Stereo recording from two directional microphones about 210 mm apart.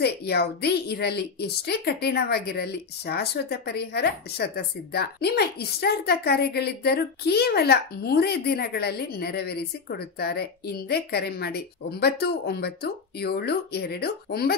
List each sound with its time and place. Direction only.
0.0 s a woman's voice: 50° left (ahead or behind)